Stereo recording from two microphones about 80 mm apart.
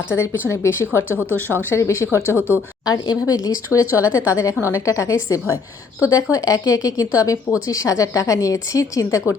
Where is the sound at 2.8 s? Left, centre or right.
Left.